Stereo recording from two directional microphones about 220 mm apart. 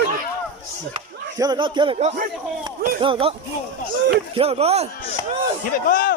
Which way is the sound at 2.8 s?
45° right (ahead or behind).